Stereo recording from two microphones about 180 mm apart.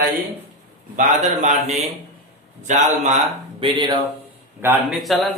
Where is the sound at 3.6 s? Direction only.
25° right (ahead or behind).